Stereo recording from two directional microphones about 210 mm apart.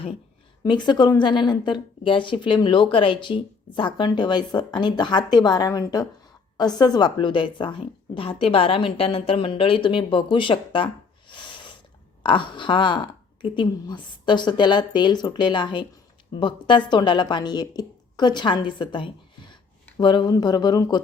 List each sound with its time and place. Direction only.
0.6 s speech: 20° left (ahead or behind)
11.3 s a sound: 20° left (ahead or behind)
12.2 s speech: 25° left (ahead or behind)